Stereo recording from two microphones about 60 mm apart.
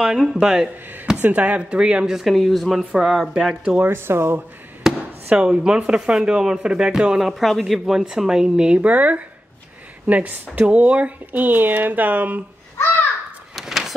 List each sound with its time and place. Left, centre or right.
0.0 s speech: centre
1.2 s speech: right
2.1 s speech: centre
3.8 s speech: right
4.9 s chop: centre
5.3 s speech: centre
13.6 s a sound: centre